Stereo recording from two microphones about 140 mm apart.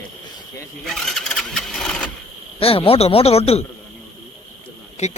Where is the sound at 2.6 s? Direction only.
40° left (ahead or behind).